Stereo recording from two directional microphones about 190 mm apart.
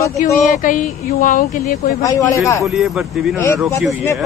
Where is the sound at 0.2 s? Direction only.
45° left (ahead or behind).